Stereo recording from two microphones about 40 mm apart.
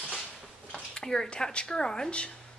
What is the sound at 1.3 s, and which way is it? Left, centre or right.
Speech, left.